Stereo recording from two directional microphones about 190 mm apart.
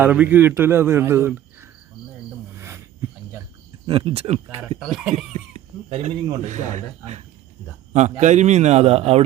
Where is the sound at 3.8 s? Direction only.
30° right (ahead or behind).